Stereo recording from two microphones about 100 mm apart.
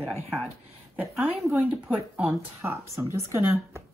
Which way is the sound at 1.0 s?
Centre (ahead or behind).